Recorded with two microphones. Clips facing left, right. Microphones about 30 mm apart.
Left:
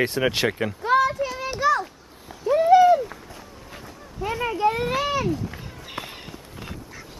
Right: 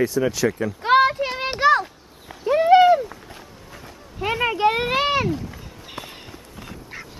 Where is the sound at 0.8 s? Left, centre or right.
Right.